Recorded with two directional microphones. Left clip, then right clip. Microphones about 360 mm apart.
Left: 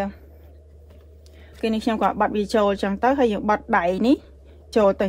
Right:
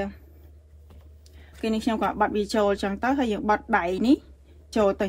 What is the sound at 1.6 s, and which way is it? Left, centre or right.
Speech, centre.